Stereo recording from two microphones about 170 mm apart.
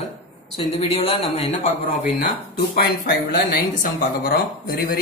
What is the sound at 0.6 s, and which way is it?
A man's voice, 35° left (ahead or behind).